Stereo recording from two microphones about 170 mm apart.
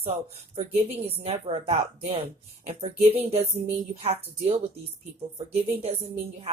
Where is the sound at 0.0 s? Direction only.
35° right (ahead or behind).